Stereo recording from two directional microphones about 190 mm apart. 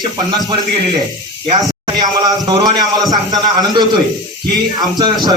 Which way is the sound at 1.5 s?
20° right (ahead or behind).